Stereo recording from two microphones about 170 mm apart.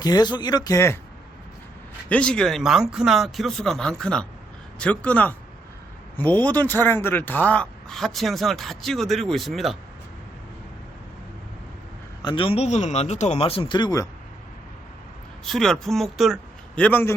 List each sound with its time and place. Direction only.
0.0 s speech: 25° left (ahead or behind)
2.0 s speech: 5° left (ahead or behind)
12.2 s speech: 30° left (ahead or behind)
15.4 s speech: centre (ahead or behind)